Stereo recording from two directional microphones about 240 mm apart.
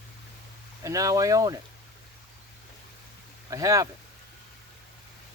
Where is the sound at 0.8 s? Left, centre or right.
Centre.